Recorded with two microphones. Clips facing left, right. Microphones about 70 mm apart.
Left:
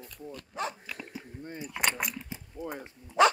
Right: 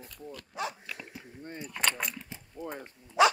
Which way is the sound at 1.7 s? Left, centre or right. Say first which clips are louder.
Left 1 dB; centre.